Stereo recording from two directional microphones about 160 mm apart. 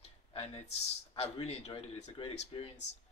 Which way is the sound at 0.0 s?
40° left (ahead or behind).